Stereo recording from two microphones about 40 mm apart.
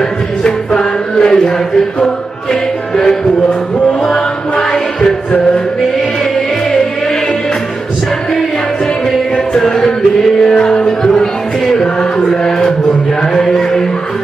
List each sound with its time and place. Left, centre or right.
0.4 s music: left
9.6 s music: centre
11.7 s chant: centre
13.3 s music: centre